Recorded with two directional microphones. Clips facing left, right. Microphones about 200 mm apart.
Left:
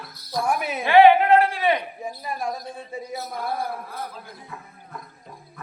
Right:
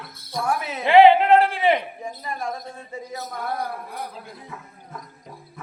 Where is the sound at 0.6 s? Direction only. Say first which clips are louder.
Left 2 dB; 15° left (ahead or behind).